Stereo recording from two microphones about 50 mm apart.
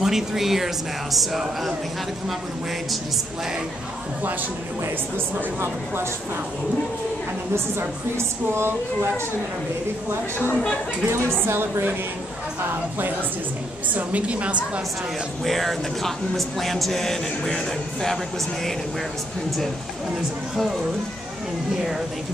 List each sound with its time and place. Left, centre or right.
0.0 s speech: centre
8.5 s a woman's voice: right
10.5 s speech: centre
11.1 s a woman's voice: right
13.9 s a woman's voice: right
15.4 s speech: centre